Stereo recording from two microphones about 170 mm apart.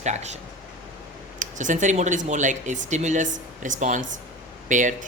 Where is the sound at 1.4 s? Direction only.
50° right (ahead or behind).